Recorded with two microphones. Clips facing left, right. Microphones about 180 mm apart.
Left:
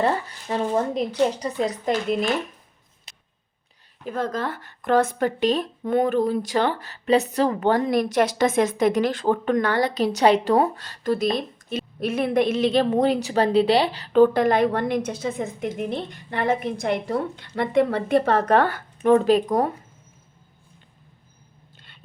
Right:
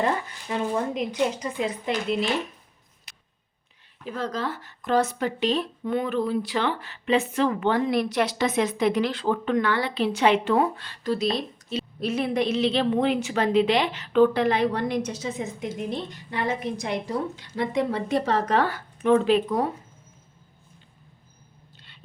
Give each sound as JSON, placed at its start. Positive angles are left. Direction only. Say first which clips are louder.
{"t": 0.0, "sound": "speech", "louder": "left 3 dB", "side_deg": 35}
{"t": 3.1, "sound": "a sound", "louder": "left 2 dB", "side_deg": 25}
{"t": 4.0, "sound": "a woman's voice", "louder": "left 3 dB", "side_deg": 50}
{"t": 19.1, "sound": "speech", "louder": "left 3 dB", "side_deg": 40}